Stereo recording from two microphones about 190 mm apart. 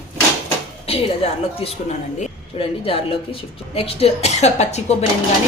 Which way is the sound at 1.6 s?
30° left (ahead or behind).